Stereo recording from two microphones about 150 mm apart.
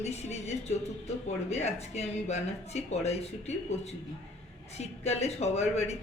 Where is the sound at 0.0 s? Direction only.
45° left (ahead or behind).